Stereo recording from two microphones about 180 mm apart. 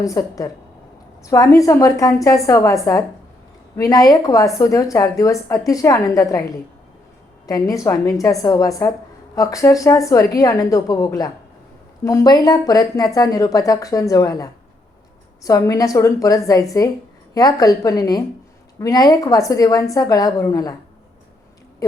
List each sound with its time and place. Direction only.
0.0 s a woman's voice: 20° left (ahead or behind)
7.4 s a woman's voice: 20° left (ahead or behind)